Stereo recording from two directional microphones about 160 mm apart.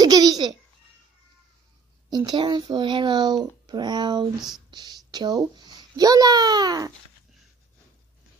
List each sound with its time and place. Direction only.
0.0 s babbling: 25° right (ahead or behind)
2.0 s a child's voice: 25° right (ahead or behind)